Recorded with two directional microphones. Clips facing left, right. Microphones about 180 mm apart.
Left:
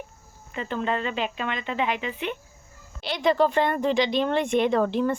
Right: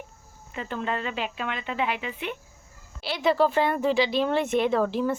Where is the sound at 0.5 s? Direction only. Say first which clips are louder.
Left 3 dB; 5° right (ahead or behind).